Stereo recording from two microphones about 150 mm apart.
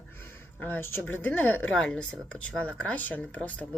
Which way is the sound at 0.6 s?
15° left (ahead or behind).